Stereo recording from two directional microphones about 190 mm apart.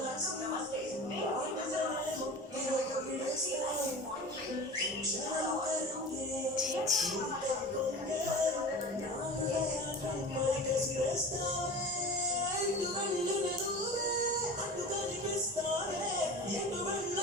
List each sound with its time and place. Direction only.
6.6 s music: centre (ahead or behind)